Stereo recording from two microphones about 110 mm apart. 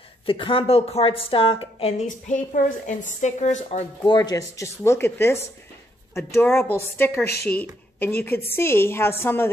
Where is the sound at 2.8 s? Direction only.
90° left.